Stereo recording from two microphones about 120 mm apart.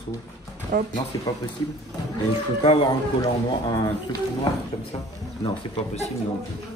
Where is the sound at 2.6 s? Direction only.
45° left (ahead or behind).